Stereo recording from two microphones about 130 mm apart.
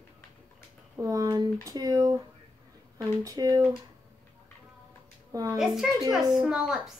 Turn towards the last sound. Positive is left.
turn(degrees=-5)  # may be behind; listen again after turning